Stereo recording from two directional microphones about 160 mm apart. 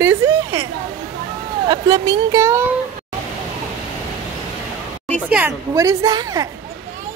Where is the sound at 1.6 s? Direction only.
25° right (ahead or behind).